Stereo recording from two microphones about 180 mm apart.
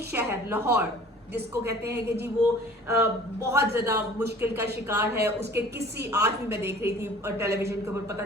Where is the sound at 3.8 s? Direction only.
10° right (ahead or behind).